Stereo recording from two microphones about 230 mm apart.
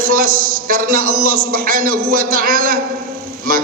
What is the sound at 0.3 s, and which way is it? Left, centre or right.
Speech, right.